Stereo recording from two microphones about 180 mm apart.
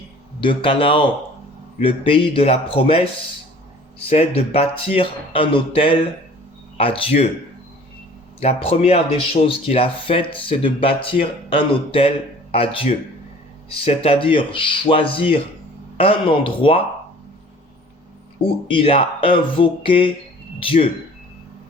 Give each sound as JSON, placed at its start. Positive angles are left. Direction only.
{"t": 0.3, "sound": "speech", "side_deg": 30}
{"t": 4.1, "sound": "speech", "side_deg": 35}
{"t": 8.4, "sound": "speech", "side_deg": 35}
{"t": 18.7, "sound": "speech", "side_deg": 30}